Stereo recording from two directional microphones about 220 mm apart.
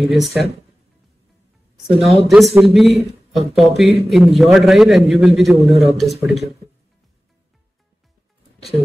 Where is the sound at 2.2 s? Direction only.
Centre (ahead or behind).